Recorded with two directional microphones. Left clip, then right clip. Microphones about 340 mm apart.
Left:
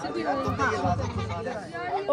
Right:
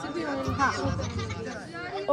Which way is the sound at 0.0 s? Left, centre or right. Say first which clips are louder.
Left 3 dB; centre.